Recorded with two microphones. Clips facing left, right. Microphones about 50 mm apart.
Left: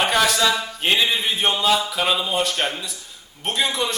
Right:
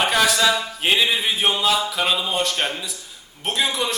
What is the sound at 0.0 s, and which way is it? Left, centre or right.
A man's voice, centre.